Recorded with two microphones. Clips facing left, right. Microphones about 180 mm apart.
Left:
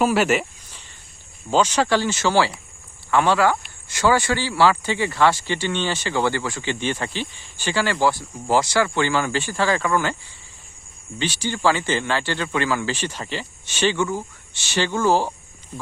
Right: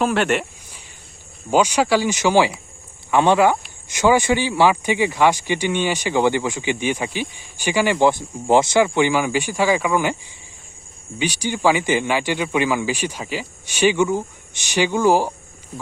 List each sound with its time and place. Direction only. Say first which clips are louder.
0.0 s speech: even; 5° left (ahead or behind)
1.5 s speech: right 2 dB; 10° right (ahead or behind)
11.2 s speech: right 2 dB; 15° right (ahead or behind)